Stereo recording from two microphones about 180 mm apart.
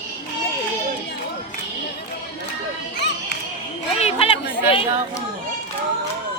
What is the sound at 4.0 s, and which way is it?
Chatter, 35° left (ahead or behind).